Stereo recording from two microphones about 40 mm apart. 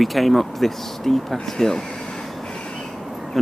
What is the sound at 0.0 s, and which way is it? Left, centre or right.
Speech, centre.